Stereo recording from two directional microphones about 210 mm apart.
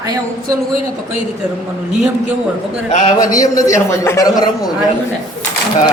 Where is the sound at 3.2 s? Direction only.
15° left (ahead or behind).